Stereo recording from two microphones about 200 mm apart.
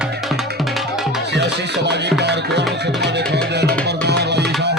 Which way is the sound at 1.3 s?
60° right (ahead or behind).